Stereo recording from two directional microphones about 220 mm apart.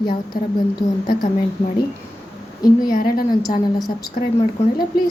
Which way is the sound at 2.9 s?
40° left (ahead or behind).